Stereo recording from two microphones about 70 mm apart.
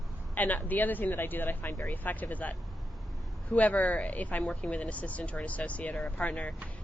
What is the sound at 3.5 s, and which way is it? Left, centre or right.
Speech, centre.